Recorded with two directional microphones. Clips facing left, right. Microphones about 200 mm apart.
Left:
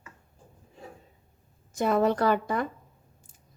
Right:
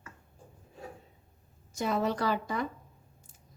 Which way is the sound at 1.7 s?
55° left (ahead or behind).